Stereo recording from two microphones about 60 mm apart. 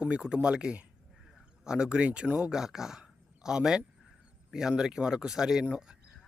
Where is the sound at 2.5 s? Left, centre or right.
Centre.